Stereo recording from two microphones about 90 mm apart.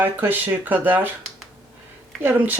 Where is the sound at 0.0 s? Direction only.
20° right (ahead or behind).